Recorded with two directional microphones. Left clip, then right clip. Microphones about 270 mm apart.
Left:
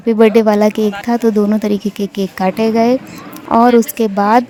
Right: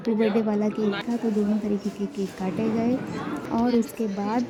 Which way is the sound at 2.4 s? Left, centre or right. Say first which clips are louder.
Left 15 dB; left.